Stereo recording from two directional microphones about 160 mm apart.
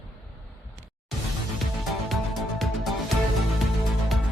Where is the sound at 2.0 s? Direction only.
Centre (ahead or behind).